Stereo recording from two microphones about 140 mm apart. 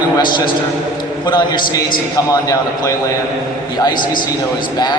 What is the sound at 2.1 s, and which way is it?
A man's voice, 25° left (ahead or behind).